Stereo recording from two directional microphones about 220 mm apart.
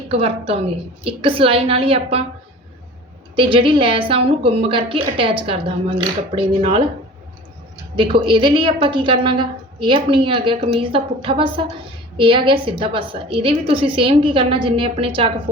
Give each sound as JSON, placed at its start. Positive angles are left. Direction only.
{"t": 0.1, "sound": "a woman's voice", "side_deg": -25}
{"t": 3.3, "sound": "a woman's voice", "side_deg": -25}
{"t": 7.9, "sound": "a woman's voice", "side_deg": -25}